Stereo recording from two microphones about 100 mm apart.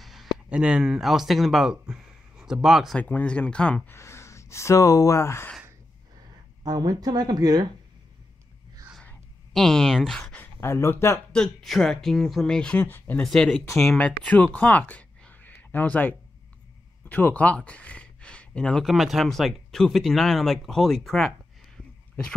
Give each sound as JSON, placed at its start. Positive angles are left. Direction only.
{"t": 0.0, "sound": "speech", "side_deg": 0}
{"t": 3.0, "sound": "speech", "side_deg": 15}
{"t": 3.9, "sound": "speech", "side_deg": 25}
{"t": 6.6, "sound": "speech", "side_deg": -40}
{"t": 9.5, "sound": "speech", "side_deg": 5}
{"t": 10.6, "sound": "speech", "side_deg": 25}
{"t": 11.3, "sound": "speech", "side_deg": 5}
{"t": 12.8, "sound": "speech", "side_deg": 20}
{"t": 13.2, "sound": "speech", "side_deg": 5}